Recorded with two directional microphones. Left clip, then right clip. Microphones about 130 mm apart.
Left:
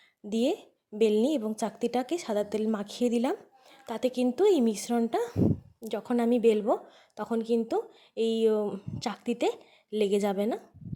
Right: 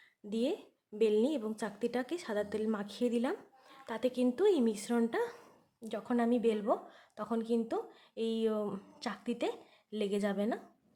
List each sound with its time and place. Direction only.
0.3 s a woman's voice: 40° left (ahead or behind)